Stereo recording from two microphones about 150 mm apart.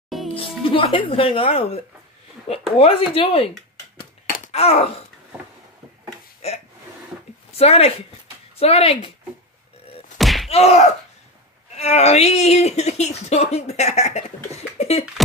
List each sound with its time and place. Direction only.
0.3 s speech: 35° left (ahead or behind)
4.5 s wail: 45° left (ahead or behind)
6.4 s speech: 45° left (ahead or behind)
10.1 s a sound: centre (ahead or behind)
10.5 s speech: 45° left (ahead or behind)